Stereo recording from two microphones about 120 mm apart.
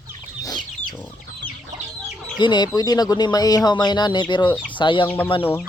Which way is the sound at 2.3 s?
35° left (ahead or behind).